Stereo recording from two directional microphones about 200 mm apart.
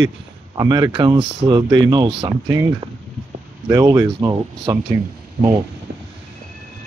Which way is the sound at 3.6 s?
15° right (ahead or behind).